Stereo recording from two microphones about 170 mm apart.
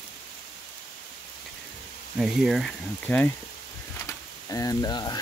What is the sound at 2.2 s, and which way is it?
Speech, centre (ahead or behind).